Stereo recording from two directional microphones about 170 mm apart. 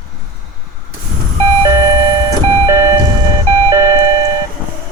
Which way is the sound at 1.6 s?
20° right (ahead or behind).